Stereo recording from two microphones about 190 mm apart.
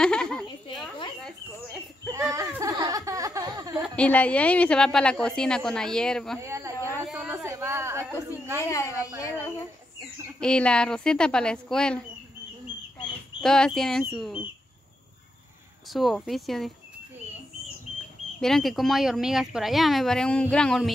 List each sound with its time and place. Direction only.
0.0 s a sound: 5° left (ahead or behind)
2.1 s a sound: 15° right (ahead or behind)
3.8 s a woman's voice: 5° left (ahead or behind)
6.4 s a woman's voice: 15° right (ahead or behind)
7.1 s a sound: 5° right (ahead or behind)
8.6 s a woman's voice: 15° left (ahead or behind)
10.4 s a woman's voice: 5° left (ahead or behind)
13.4 s a woman's voice: 5° left (ahead or behind)
15.9 s a woman's voice: centre (ahead or behind)
18.4 s a woman's voice: centre (ahead or behind)